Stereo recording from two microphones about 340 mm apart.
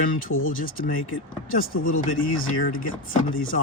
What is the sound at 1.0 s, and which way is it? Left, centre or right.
Speech, left.